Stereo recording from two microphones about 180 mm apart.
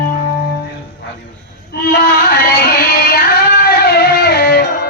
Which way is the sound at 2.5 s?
60° left (ahead or behind).